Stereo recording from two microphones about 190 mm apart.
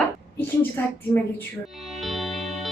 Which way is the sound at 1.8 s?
Centre (ahead or behind).